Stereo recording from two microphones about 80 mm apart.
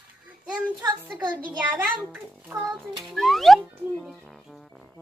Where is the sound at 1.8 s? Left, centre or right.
Centre.